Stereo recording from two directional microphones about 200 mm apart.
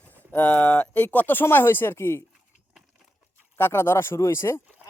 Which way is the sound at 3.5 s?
10° left (ahead or behind).